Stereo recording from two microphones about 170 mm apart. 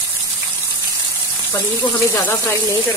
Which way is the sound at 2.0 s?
15° left (ahead or behind).